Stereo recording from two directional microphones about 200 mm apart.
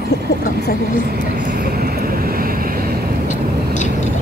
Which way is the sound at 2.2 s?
45° right (ahead or behind).